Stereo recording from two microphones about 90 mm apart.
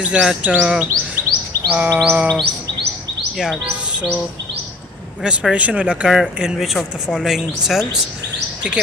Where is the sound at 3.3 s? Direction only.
5° right (ahead or behind).